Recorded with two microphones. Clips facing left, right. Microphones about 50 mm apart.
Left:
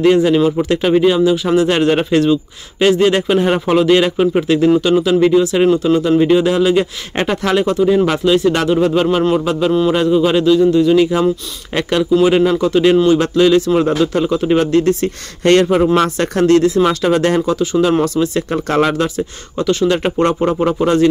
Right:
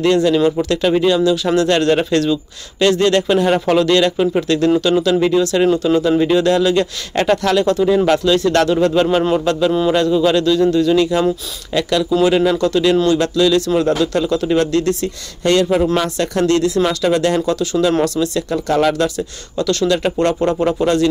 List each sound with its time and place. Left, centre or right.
0.1 s speech: centre
11.7 s speech: left
12.2 s speech: centre
15.4 s speech: left
16.2 s speech: left
18.8 s speech: left